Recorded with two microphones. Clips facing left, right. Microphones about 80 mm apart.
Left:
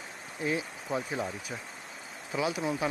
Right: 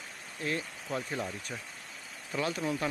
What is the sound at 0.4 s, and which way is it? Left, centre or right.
Speech, centre.